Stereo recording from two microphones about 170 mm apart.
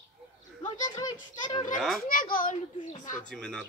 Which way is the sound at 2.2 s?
55° left (ahead or behind).